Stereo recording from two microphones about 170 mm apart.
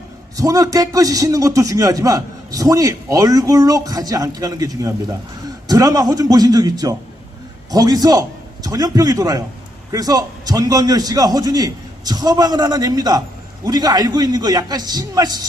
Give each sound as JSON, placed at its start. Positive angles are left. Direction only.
{"t": 0.3, "sound": "a man's voice", "side_deg": -20}